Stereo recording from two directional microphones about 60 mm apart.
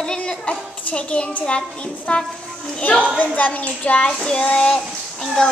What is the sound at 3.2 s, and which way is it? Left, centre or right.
Speech, left.